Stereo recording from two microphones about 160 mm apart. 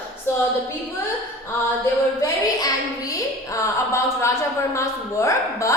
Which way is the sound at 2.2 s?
20° left (ahead or behind).